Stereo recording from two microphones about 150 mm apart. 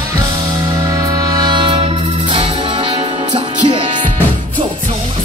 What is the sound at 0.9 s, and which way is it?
Music, 25° right (ahead or behind).